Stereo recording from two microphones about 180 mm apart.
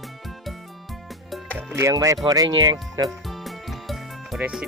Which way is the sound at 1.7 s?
15° right (ahead or behind).